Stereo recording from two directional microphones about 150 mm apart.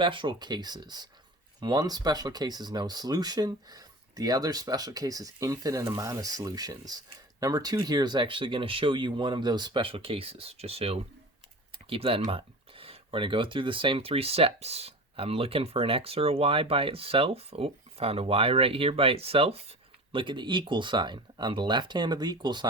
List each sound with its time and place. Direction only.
0.0 s speech: 35° right (ahead or behind)